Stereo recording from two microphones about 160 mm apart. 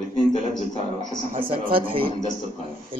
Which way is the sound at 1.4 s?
35° right (ahead or behind).